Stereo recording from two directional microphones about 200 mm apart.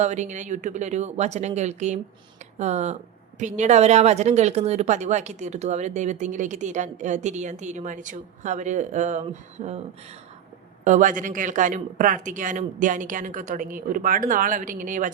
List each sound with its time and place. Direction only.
0.0 s speech: 35° right (ahead or behind)
10.8 s speech: 40° right (ahead or behind)